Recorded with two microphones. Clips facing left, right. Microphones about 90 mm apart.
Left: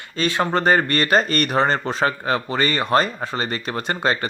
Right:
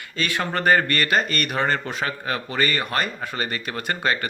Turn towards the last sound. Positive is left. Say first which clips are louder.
# left 2 dB
turn(degrees=30)  # may be behind; listen again after turning